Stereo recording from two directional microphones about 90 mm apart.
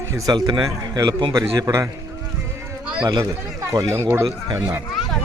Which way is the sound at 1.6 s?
35° right (ahead or behind).